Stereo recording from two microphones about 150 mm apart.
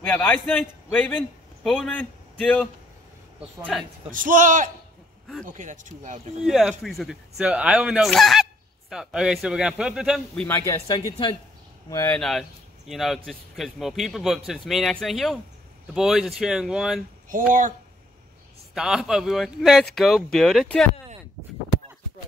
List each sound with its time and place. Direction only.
0.0 s a man's voice: 10° left (ahead or behind)
4.1 s speech: 65° right (ahead or behind)
6.4 s speech: centre (ahead or behind)
10.5 s speech: 20° left (ahead or behind)
12.1 s speech: centre (ahead or behind)
17.3 s speech: 60° right (ahead or behind)
18.8 s speech: 5° right (ahead or behind)